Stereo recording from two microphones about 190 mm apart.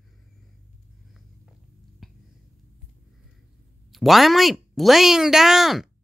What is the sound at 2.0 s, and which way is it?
Finger snapping, centre (ahead or behind).